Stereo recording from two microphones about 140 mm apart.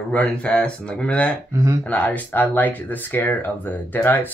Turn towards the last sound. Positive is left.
turn(degrees=15)  # may be behind; listen again after turning